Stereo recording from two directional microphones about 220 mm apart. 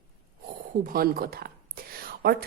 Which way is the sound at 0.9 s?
40° right (ahead or behind).